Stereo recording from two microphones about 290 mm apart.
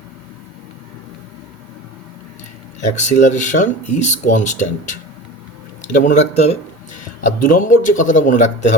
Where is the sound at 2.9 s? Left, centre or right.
Left.